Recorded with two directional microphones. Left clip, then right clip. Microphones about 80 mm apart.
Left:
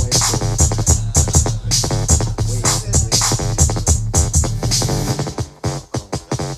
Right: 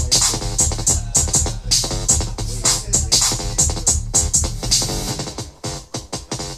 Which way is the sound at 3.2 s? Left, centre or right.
Left.